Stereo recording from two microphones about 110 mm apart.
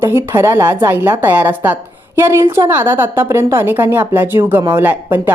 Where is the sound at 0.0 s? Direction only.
25° right (ahead or behind).